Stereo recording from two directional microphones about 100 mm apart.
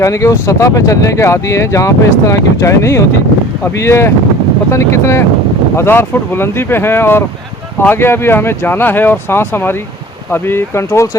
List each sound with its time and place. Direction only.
0.0 s speech: 30° left (ahead or behind)